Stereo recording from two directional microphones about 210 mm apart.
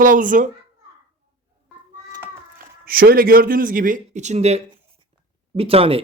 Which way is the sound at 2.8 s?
45° right (ahead or behind).